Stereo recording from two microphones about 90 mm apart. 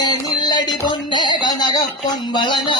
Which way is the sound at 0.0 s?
50° left (ahead or behind).